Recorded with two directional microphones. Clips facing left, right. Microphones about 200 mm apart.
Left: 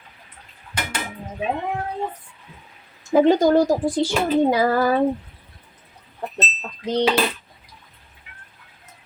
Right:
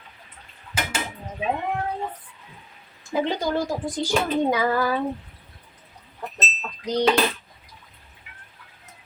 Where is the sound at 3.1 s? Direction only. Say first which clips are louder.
Left 9 dB; 45° left (ahead or behind).